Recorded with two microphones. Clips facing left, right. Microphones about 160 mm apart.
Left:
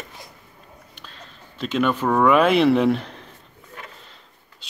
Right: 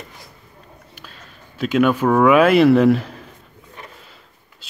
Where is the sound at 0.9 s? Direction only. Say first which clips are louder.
Right 1 dB; 5° right (ahead or behind).